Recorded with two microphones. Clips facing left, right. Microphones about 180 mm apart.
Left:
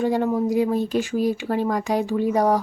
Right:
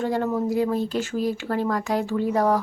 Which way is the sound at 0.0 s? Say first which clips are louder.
Left 3 dB; 15° left (ahead or behind).